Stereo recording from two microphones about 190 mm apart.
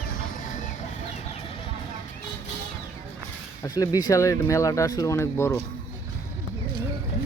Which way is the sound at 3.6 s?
20° left (ahead or behind).